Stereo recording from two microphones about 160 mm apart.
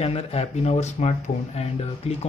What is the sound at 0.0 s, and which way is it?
Speech, 40° left (ahead or behind).